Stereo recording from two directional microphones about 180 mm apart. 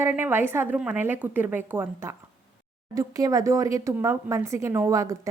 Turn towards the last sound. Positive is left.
turn(degrees=-15)  # may be behind; listen again after turning